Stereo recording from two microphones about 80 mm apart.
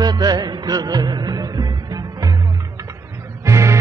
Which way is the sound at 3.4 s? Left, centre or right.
Right.